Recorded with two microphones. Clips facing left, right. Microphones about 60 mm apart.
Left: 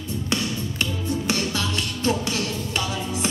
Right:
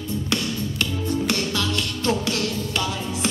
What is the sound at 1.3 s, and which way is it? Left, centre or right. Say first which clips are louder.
Music: right 1 dB; left.